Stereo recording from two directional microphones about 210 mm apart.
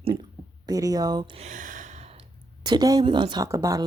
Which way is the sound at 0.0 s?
20° right (ahead or behind).